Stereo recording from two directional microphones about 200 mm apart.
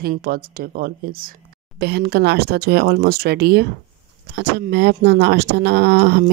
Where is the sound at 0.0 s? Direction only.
45° right (ahead or behind).